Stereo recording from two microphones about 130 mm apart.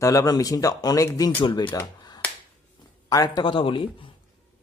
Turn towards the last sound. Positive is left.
turn(degrees=40)  # may be behind; listen again after turning